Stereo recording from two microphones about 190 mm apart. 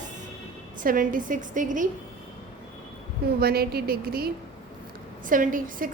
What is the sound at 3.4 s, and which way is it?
A woman's voice, 55° right (ahead or behind).